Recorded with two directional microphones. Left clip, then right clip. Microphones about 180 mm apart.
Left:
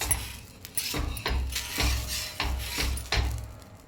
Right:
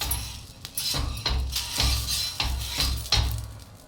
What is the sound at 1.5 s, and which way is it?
Music, 25° left (ahead or behind).